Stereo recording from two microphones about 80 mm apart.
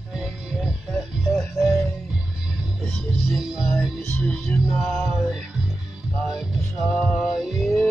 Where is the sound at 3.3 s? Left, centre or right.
Centre.